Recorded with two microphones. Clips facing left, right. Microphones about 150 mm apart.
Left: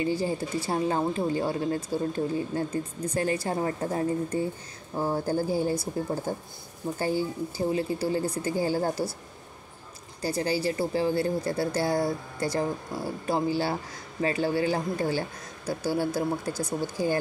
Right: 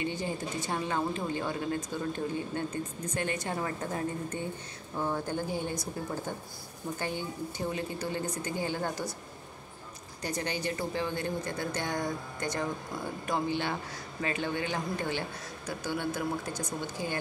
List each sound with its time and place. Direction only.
0.0 s speech: 35° left (ahead or behind)
10.2 s speech: 35° left (ahead or behind)
16.5 s speech: 10° left (ahead or behind)